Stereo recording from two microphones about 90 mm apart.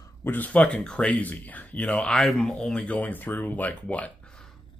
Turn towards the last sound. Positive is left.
turn(degrees=15)  # may be behind; listen again after turning